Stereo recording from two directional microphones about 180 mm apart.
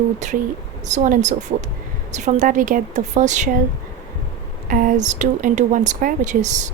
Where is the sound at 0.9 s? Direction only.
45° right (ahead or behind).